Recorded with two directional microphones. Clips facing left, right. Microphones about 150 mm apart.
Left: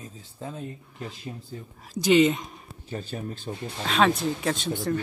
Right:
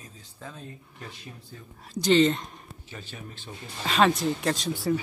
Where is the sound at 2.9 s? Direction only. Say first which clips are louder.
Left 9 dB; 40° left (ahead or behind).